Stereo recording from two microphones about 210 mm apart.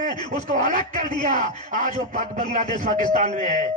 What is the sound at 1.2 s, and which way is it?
Speech, 35° right (ahead or behind).